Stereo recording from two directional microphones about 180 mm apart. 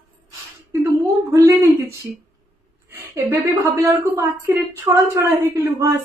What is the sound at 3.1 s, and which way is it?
A woman's voice, 15° right (ahead or behind).